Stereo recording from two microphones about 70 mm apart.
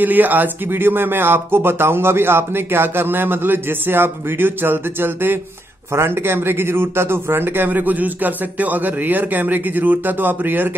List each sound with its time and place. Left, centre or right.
0.0 s a man's voice: right